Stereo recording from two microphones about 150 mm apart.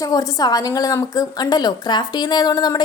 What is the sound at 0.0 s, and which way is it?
A woman's voice, 25° left (ahead or behind).